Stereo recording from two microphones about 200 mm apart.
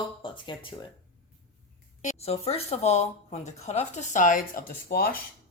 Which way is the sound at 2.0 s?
35° left (ahead or behind).